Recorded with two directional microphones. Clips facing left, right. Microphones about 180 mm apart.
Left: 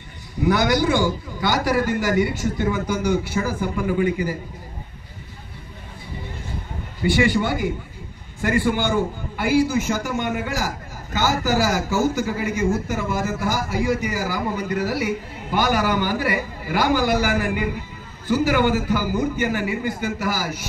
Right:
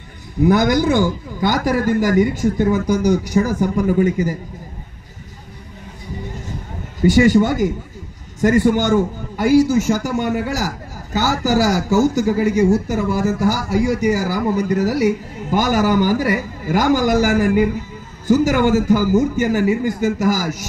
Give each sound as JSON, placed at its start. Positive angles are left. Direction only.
{"t": 0.5, "sound": "a man's voice", "side_deg": -45}
{"t": 7.0, "sound": "a man's voice", "side_deg": -40}